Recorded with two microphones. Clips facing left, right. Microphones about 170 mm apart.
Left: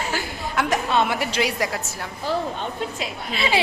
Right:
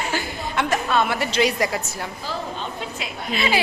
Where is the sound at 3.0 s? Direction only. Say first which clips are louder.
Right 1 dB; 30° left (ahead or behind).